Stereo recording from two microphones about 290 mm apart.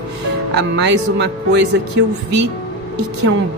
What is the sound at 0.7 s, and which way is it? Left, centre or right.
Speech, right.